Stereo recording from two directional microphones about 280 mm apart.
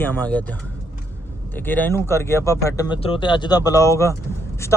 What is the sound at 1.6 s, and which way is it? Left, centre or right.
Speech, centre.